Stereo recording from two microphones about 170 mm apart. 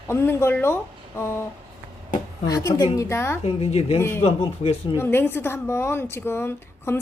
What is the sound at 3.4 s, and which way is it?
Speech, 35° left (ahead or behind).